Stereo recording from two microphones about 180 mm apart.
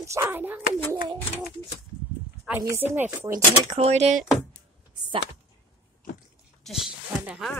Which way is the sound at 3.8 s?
35° right (ahead or behind).